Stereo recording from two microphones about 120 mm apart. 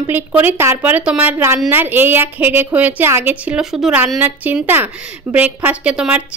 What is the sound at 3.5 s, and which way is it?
Speech, 5° right (ahead or behind).